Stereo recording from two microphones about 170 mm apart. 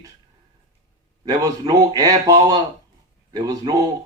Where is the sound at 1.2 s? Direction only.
25° right (ahead or behind).